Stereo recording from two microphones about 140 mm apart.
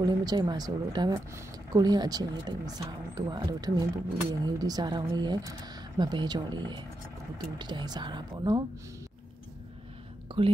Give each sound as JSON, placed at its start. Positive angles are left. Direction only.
{"t": 0.0, "sound": "speech", "side_deg": -30}
{"t": 10.3, "sound": "speech", "side_deg": -35}